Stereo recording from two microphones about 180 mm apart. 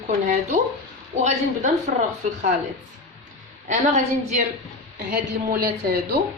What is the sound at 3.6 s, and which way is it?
Speech, 40° right (ahead or behind).